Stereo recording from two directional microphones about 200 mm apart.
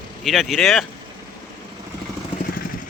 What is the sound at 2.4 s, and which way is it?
Vehicle, 45° left (ahead or behind).